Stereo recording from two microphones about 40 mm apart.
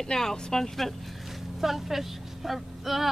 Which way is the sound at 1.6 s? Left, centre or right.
Centre.